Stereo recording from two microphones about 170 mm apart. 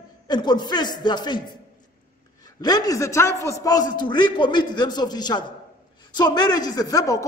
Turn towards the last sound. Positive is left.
turn(degrees=20)  # may be behind; listen again after turning